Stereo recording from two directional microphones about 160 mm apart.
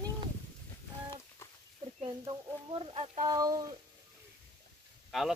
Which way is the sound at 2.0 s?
35° right (ahead or behind).